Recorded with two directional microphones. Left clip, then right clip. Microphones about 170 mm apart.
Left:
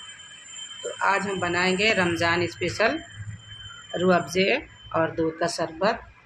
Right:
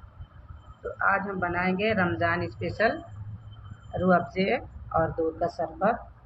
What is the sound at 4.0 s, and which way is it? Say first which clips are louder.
Speech: left 3 dB; 35° left (ahead or behind).